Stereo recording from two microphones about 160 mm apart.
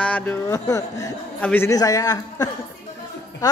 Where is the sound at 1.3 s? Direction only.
10° left (ahead or behind).